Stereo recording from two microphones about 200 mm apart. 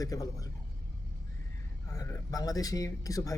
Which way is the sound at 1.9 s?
15° left (ahead or behind).